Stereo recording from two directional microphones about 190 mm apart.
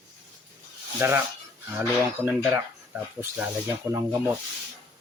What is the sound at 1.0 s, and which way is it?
Speech, 10° right (ahead or behind).